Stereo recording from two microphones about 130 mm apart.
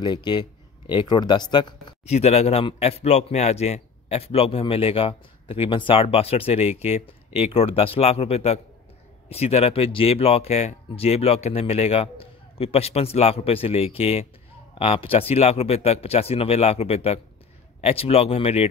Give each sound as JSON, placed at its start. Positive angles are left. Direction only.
{"t": 0.0, "sound": "speech", "side_deg": 35}
{"t": 2.0, "sound": "a man's voice", "side_deg": 55}